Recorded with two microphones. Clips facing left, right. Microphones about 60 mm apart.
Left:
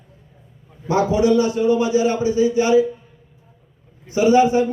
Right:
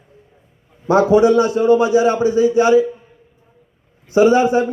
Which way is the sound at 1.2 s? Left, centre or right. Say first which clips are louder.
Right 4 dB; right.